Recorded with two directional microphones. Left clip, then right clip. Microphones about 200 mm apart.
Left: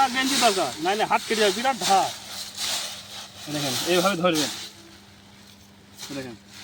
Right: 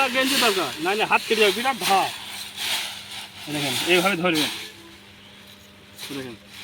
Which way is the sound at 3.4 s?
Centre (ahead or behind).